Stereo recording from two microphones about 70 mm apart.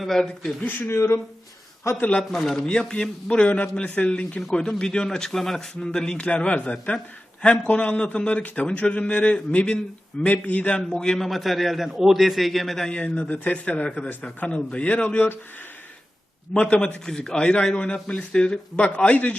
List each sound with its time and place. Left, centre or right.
0.0 s a man's voice: centre
0.9 s speech: left
2.3 s a man's voice: centre
13.0 s a man's voice: centre
16.6 s a man's voice: centre